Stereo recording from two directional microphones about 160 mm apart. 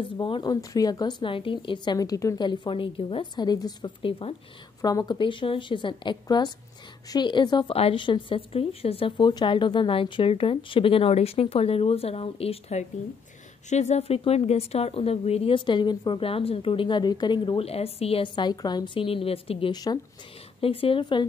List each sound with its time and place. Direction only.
0.2 s a woman's voice: 30° left (ahead or behind)
19.7 s a woman's voice: 25° left (ahead or behind)